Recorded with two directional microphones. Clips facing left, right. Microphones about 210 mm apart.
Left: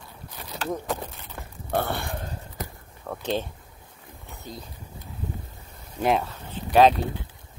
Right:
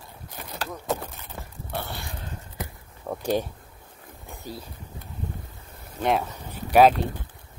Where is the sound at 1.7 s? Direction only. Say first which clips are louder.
Left 8 dB; 55° left (ahead or behind).